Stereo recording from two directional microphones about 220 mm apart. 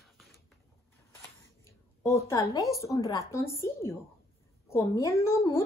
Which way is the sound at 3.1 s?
15° left (ahead or behind).